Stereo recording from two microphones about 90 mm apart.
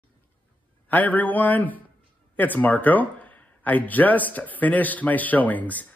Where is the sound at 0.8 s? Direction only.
20° left (ahead or behind).